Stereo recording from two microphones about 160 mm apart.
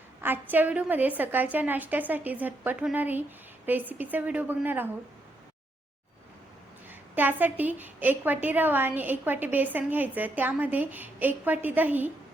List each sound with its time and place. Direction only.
0.2 s a woman's voice: 10° right (ahead or behind)
7.2 s a woman's voice: 10° right (ahead or behind)